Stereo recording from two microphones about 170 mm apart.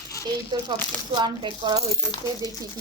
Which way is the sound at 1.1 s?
25° right (ahead or behind).